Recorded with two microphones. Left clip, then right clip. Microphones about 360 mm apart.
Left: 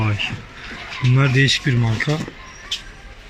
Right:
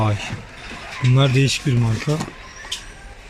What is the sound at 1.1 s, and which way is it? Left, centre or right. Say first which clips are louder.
Speech: left 2 dB; centre.